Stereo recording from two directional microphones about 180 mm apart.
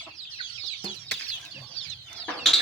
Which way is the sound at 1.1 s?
70° right (ahead or behind).